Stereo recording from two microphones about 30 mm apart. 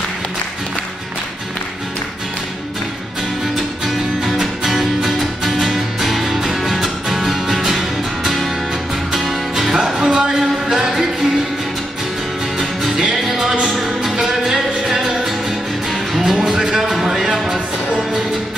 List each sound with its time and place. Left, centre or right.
4.4 s music: centre
9.8 s music: right
12.5 s music: centre